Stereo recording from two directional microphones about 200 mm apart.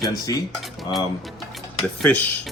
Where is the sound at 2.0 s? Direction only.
5° left (ahead or behind).